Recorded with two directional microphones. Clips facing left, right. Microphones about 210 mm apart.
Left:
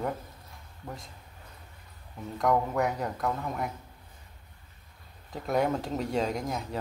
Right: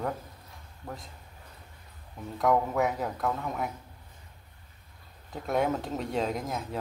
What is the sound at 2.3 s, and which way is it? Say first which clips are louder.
Speech: right 1 dB; centre (ahead or behind).